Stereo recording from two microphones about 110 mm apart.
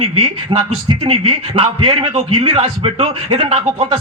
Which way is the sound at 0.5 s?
50° right (ahead or behind).